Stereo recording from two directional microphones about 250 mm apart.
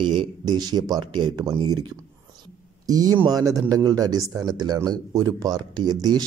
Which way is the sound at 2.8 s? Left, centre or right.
Centre.